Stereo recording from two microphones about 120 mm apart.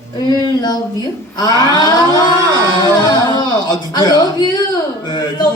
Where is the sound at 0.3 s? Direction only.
35° left (ahead or behind).